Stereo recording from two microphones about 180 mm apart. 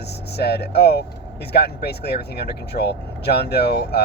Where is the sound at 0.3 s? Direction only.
65° left (ahead or behind).